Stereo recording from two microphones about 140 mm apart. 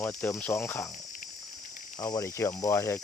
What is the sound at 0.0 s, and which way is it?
Speech, 10° left (ahead or behind).